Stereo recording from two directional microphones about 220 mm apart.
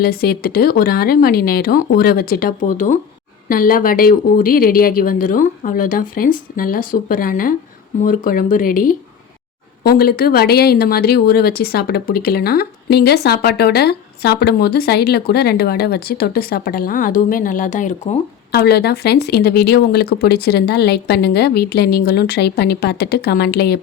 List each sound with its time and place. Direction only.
0.0 s speech: 45° left (ahead or behind)
18.5 s speech: 45° left (ahead or behind)